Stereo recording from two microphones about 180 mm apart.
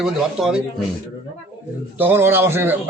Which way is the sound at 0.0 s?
5° right (ahead or behind).